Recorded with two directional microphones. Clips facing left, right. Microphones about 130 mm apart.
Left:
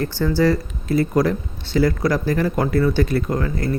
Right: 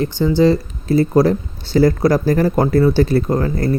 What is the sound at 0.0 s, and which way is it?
Speech, 20° right (ahead or behind).